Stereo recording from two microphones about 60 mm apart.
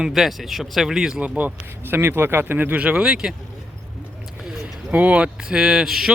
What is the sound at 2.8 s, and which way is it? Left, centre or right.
Speech, centre.